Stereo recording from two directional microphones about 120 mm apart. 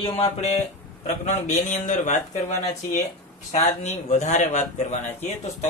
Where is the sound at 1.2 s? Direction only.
75° left (ahead or behind).